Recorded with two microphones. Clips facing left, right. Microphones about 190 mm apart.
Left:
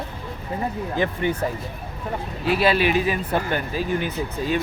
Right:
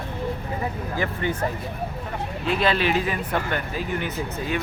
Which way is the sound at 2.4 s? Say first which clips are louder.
Left 3 dB; 5° left (ahead or behind).